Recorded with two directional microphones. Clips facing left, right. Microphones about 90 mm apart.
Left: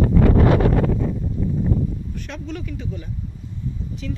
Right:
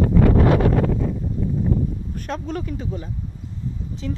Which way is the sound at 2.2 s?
40° right (ahead or behind).